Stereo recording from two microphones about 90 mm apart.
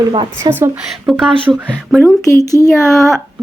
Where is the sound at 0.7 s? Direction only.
5° right (ahead or behind).